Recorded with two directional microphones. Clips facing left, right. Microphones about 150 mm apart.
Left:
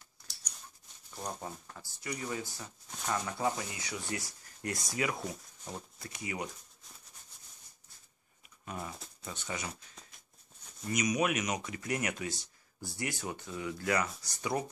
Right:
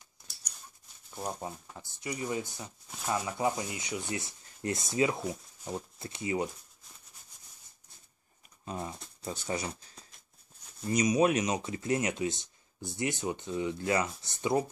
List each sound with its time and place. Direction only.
1.1 s speech: 10° right (ahead or behind)
2.9 s speech: 5° right (ahead or behind); by 6.5 s 25° right (ahead or behind)
8.6 s speech: 25° right (ahead or behind)